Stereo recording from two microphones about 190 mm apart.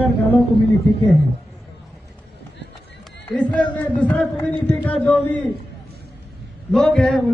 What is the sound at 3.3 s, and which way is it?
A man's voice, 5° left (ahead or behind).